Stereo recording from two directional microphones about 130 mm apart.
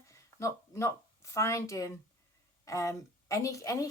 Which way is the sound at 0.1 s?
25° left (ahead or behind).